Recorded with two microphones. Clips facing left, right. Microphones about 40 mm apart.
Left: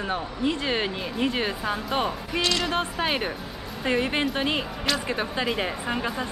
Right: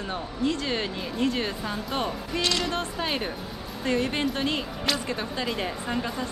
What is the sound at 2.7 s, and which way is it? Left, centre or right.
Speech, left.